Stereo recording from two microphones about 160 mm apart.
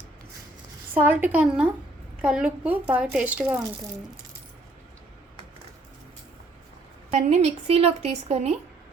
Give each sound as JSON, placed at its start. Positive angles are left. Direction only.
{"t": 0.9, "sound": "speech", "side_deg": -10}
{"t": 7.1, "sound": "a woman's voice", "side_deg": -45}